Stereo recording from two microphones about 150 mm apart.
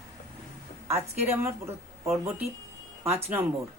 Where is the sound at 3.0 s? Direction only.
15° right (ahead or behind).